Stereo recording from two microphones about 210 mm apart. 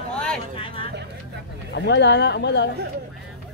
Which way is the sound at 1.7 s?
55° left (ahead or behind).